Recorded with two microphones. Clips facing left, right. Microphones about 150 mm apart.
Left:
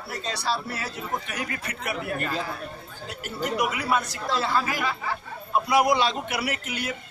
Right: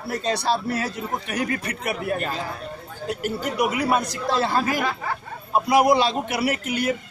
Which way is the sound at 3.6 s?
40° right (ahead or behind).